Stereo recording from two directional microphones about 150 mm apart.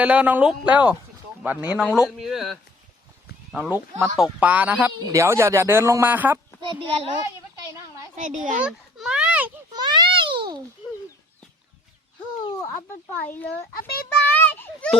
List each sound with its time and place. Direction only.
0.0 s a man's voice: 10° right (ahead or behind)
6.7 s a child's voice: 35° right (ahead or behind)
8.1 s a child's voice: 55° right (ahead or behind)
8.6 s a sound: 5° right (ahead or behind)
9.7 s babbling: 30° right (ahead or behind)
13.1 s speech: 10° left (ahead or behind)
13.7 s a child's voice: 85° left
14.3 s a child's voice: 15° left (ahead or behind)